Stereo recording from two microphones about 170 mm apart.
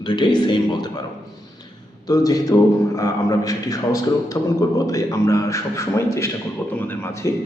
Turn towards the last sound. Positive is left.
turn(degrees=15)  # may be behind; listen again after turning